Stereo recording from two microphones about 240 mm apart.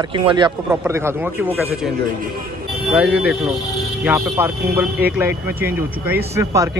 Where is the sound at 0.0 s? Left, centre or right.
Right.